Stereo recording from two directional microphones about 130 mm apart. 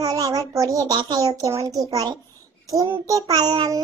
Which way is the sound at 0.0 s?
30° right (ahead or behind).